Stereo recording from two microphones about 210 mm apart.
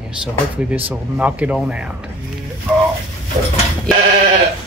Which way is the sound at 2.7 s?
5° right (ahead or behind).